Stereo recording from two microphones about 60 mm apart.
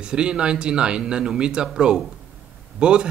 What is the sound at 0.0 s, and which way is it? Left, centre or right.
A man's voice, centre.